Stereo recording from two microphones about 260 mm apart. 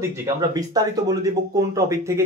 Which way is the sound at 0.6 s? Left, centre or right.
Centre.